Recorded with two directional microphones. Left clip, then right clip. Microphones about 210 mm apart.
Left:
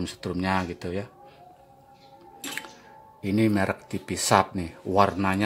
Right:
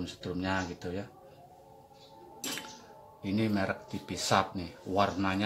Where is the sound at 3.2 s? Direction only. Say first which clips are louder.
Left 8 dB; 45° left (ahead or behind).